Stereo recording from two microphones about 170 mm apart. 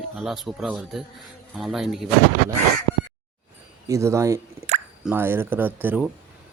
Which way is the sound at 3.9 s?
15° right (ahead or behind).